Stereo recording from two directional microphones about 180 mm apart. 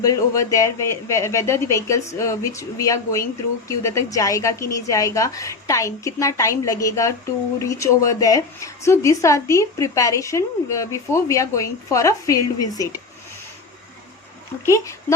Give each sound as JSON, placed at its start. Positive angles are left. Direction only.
{"t": 0.0, "sound": "a woman's voice", "side_deg": 20}
{"t": 14.6, "sound": "a woman's voice", "side_deg": 15}